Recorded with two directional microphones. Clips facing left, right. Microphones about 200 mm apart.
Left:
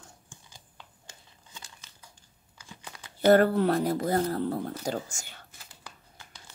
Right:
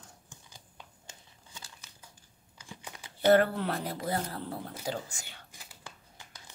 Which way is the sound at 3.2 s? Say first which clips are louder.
Left 4 dB; 40° left (ahead or behind).